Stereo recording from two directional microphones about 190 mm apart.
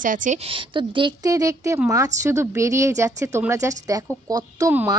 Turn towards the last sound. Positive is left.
turn(degrees=-15)  # may be behind; listen again after turning